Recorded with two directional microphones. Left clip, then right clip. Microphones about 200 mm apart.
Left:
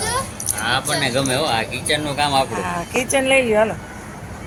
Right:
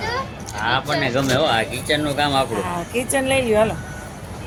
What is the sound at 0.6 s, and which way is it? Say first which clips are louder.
Speech: even; 15° right (ahead or behind).